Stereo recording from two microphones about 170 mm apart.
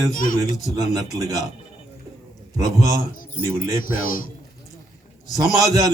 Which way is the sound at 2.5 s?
20° right (ahead or behind).